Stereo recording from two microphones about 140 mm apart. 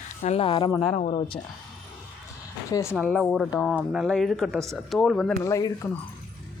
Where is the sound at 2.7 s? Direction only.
25° left (ahead or behind).